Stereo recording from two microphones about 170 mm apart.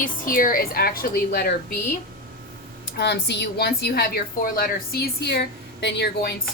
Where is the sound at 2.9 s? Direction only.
80° left.